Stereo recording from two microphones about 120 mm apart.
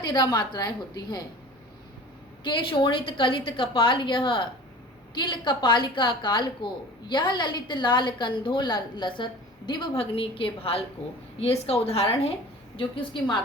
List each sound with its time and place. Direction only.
0.0 s a woman's voice: 35° left (ahead or behind)
2.4 s a woman's voice: 40° left (ahead or behind)
10.0 s a woman's voice: 50° left (ahead or behind)
12.7 s a woman's voice: 45° left (ahead or behind)